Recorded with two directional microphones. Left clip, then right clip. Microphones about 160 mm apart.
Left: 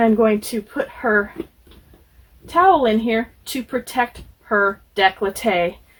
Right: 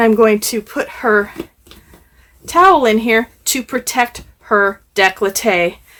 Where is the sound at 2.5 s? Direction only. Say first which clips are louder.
Right 5 dB; 40° right (ahead or behind).